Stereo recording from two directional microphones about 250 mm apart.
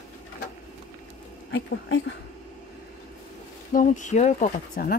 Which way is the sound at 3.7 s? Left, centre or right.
Left.